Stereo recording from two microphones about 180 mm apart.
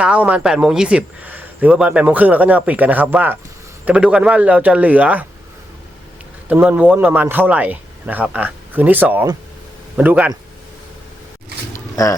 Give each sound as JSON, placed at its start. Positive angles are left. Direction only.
{"t": 0.0, "sound": "speech", "side_deg": -5}
{"t": 6.5, "sound": "speech", "side_deg": -10}
{"t": 11.7, "sound": "a sound", "side_deg": 20}